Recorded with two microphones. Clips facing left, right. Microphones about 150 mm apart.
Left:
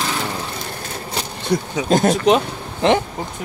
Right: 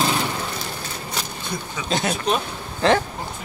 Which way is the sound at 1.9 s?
45° left (ahead or behind).